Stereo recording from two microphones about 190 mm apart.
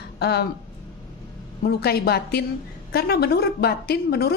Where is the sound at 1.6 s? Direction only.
55° left (ahead or behind).